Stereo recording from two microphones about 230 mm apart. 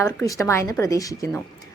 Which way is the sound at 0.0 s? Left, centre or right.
Centre.